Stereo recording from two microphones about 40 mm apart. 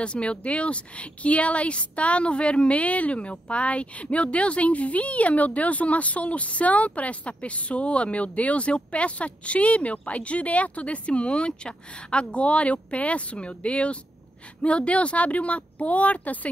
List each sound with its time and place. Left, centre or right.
0.0 s speech: left